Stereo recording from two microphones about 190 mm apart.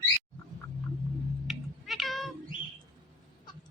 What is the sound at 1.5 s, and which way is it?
Cat, centre (ahead or behind).